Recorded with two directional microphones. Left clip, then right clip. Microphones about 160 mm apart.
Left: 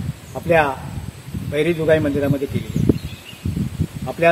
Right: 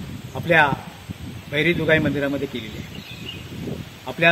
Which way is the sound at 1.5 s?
Centre (ahead or behind).